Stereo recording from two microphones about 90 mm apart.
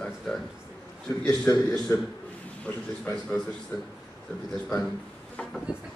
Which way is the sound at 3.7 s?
30° left (ahead or behind).